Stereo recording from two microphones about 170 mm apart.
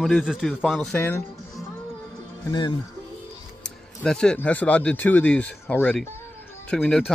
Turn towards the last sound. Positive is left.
turn(degrees=10)  # may be behind; listen again after turning